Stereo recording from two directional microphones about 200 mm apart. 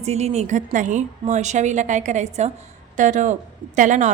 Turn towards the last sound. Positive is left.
turn(degrees=-35)  # may be behind; listen again after turning